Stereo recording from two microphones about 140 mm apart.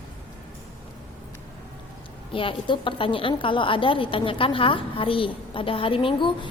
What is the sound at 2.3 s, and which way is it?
A woman's voice, 40° left (ahead or behind).